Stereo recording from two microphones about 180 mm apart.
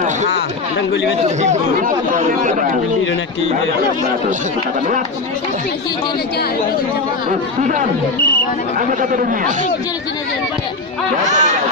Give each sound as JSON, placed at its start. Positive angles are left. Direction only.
{"t": 1.2, "sound": "speech", "side_deg": -40}
{"t": 7.3, "sound": "speech", "side_deg": -45}
{"t": 9.0, "sound": "speech", "side_deg": -50}
{"t": 11.3, "sound": "speech", "side_deg": -40}